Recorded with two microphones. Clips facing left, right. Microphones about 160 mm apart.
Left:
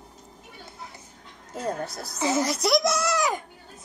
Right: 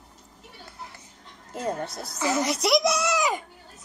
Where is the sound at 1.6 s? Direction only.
Centre (ahead or behind).